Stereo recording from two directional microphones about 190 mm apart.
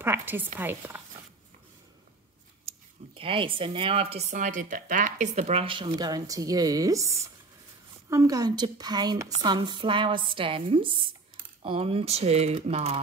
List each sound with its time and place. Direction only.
0.0 s a woman's voice: 10° right (ahead or behind)
3.2 s speech: 30° right (ahead or behind)